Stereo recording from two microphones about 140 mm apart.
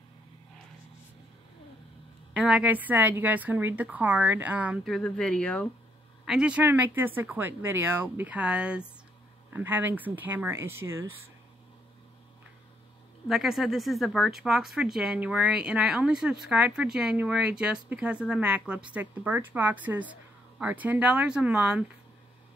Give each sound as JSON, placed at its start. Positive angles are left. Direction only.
{"t": 2.3, "sound": "speech", "side_deg": -10}
{"t": 4.8, "sound": "speech", "side_deg": 5}
{"t": 6.2, "sound": "speech", "side_deg": -5}
{"t": 13.3, "sound": "speech", "side_deg": -5}